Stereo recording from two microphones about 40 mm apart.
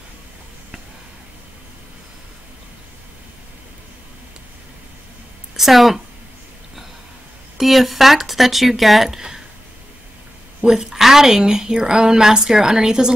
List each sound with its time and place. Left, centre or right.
5.6 s a woman's voice: centre
7.5 s speech: centre
10.6 s a woman's voice: centre